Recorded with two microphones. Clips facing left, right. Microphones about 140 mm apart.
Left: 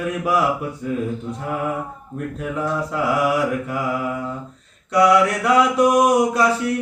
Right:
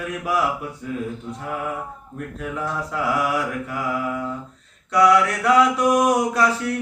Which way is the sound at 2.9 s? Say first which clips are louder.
Left 2 dB; 15° left (ahead or behind).